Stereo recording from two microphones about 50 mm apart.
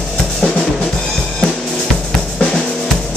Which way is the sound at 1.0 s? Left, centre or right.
Centre.